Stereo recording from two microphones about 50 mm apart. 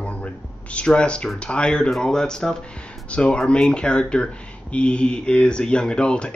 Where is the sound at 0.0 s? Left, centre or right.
Left.